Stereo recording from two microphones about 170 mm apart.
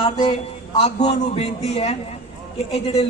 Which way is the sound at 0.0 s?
40° left (ahead or behind).